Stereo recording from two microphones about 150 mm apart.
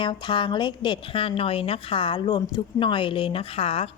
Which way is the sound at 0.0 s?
30° left (ahead or behind).